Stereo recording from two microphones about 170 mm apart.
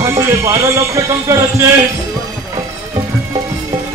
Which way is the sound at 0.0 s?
15° right (ahead or behind).